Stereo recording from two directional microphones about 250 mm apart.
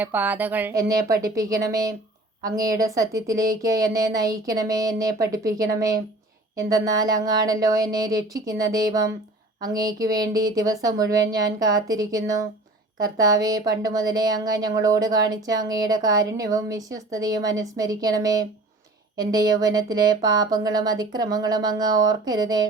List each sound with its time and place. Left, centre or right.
0.0 s speech: centre